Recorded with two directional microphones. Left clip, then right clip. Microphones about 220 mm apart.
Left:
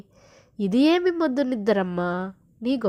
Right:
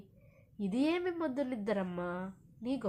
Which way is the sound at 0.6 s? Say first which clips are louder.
Left 13 dB; 35° left (ahead or behind).